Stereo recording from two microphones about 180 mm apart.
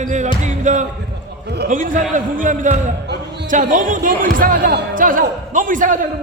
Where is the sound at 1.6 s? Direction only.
50° right (ahead or behind).